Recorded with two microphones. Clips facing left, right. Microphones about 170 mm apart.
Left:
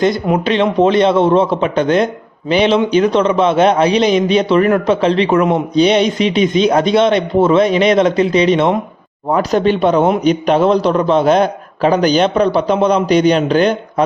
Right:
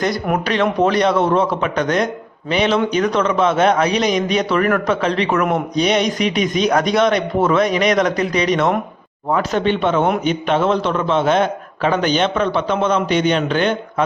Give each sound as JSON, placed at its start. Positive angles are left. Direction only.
{"t": 0.0, "sound": "a man's voice", "side_deg": 25}